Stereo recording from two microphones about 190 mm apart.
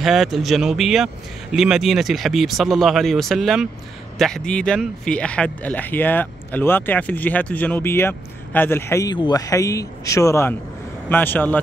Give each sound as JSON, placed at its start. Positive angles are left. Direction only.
{"t": 0.0, "sound": "speech", "side_deg": 0}